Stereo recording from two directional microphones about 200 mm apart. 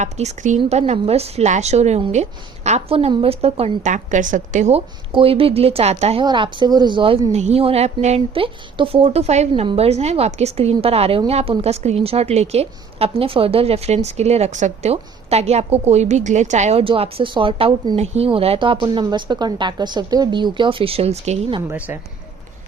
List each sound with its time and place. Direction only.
0.0 s a woman's voice: 35° right (ahead or behind)
21.7 s speech: 10° right (ahead or behind)